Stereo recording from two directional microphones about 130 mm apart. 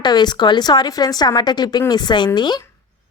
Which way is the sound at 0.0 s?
35° left (ahead or behind).